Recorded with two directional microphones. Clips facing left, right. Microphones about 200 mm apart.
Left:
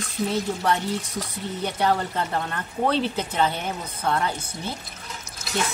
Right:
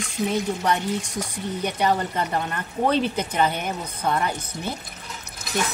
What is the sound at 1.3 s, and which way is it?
A woman's voice, 15° right (ahead or behind).